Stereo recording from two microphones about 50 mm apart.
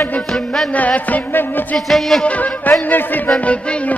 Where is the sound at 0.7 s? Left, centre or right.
Left.